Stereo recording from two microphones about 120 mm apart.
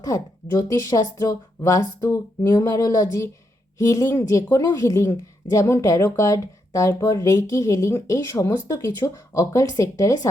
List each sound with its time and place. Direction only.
0.0 s a woman's voice: 30° left (ahead or behind)